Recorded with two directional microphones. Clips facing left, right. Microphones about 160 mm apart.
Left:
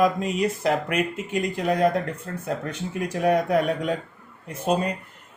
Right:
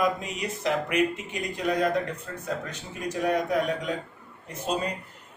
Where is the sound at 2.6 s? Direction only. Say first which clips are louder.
Left 5 dB; 60° left (ahead or behind).